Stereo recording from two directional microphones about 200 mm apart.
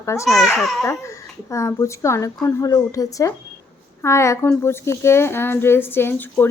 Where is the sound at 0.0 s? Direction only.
15° left (ahead or behind).